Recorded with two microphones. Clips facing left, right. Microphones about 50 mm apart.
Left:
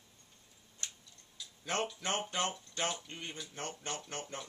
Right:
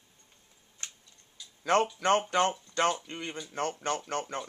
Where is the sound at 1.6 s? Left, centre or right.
Right.